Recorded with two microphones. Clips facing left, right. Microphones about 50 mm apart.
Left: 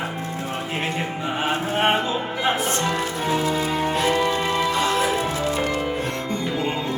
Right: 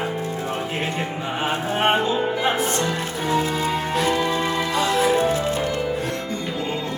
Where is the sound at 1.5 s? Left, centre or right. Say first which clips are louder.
Even; centre.